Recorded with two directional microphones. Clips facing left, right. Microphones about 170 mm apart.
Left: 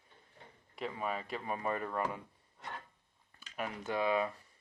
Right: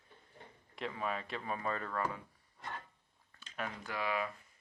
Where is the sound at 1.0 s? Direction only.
5° left (ahead or behind).